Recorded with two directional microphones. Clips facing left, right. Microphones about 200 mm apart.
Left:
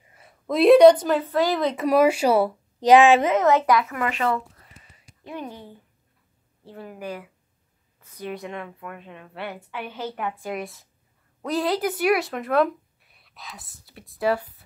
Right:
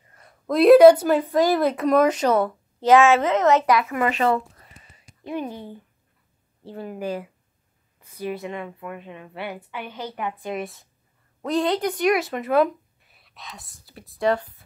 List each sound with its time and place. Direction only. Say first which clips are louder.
0.1 s a woman's voice: right 2 dB; 5° left (ahead or behind)
1.9 s a woman's voice: left 1 dB; 10° left (ahead or behind)
3.9 s a woman's voice: right 4 dB; 25° right (ahead or behind)
6.6 s a woman's voice: right 5 dB; 30° right (ahead or behind)
8.0 s a woman's voice: right 3 dB; 10° right (ahead or behind)